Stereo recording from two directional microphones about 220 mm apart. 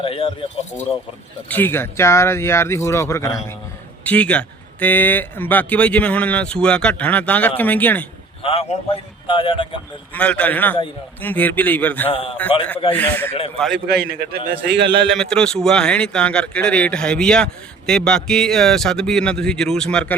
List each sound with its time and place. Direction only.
0.0 s speech: 25° left (ahead or behind)
1.5 s speech: 10° left (ahead or behind)
8.4 s a man's voice: 25° left (ahead or behind)
10.2 s speech: 5° left (ahead or behind)
13.8 s a man's voice: 45° right (ahead or behind)
15.0 s speech: centre (ahead or behind)